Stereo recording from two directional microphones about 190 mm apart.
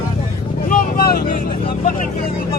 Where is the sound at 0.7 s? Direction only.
50° left (ahead or behind).